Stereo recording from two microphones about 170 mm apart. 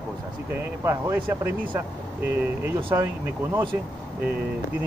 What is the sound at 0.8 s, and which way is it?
Speech, 15° right (ahead or behind).